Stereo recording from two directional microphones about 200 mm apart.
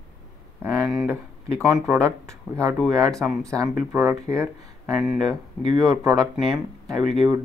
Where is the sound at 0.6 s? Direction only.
10° right (ahead or behind).